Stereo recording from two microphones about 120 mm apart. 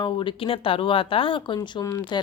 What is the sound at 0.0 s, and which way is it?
Speech, 40° left (ahead or behind).